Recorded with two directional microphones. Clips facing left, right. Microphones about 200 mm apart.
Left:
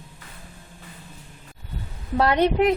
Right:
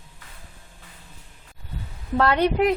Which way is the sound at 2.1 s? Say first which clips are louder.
Left 1 dB; 20° left (ahead or behind).